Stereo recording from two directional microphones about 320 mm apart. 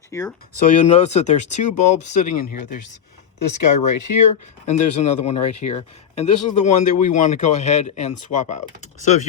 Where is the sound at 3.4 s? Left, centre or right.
Left.